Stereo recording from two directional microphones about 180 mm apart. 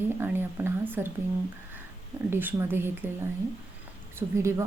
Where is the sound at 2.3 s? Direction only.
10° right (ahead or behind).